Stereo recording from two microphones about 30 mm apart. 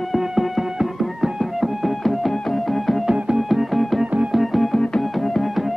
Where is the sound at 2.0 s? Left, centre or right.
Centre.